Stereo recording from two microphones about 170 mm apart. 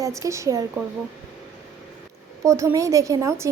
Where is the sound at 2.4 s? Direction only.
15° right (ahead or behind).